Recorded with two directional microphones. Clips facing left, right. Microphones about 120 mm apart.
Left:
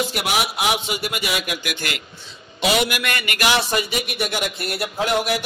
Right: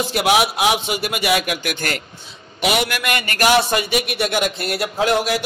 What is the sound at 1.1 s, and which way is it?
Speech, 60° right (ahead or behind).